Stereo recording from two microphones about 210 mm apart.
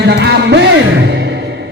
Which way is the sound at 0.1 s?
55° right (ahead or behind).